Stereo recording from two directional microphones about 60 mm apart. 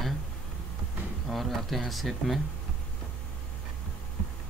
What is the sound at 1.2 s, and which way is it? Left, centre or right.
Speech, centre.